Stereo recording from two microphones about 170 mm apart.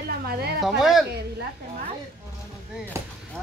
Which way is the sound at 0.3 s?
70° right (ahead or behind).